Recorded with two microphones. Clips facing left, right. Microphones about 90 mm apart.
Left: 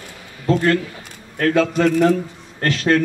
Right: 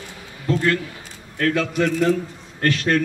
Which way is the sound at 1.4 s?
40° left (ahead or behind).